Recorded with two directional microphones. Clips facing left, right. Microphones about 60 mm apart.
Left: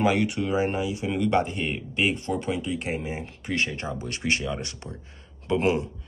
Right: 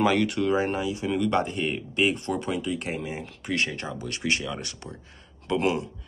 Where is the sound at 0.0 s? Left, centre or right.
Centre.